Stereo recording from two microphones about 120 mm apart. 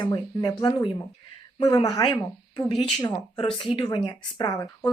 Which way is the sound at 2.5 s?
40° left (ahead or behind).